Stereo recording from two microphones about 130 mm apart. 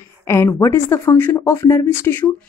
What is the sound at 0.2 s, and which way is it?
Speech, 20° left (ahead or behind).